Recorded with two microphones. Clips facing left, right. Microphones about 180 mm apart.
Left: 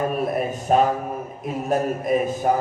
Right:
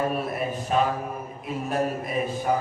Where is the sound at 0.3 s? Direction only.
45° left (ahead or behind).